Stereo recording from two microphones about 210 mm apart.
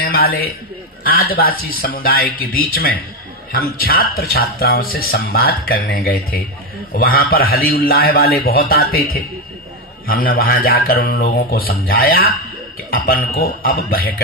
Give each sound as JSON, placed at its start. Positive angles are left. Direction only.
{"t": 0.0, "sound": "speech", "side_deg": 45}
{"t": 13.3, "sound": "speech", "side_deg": 45}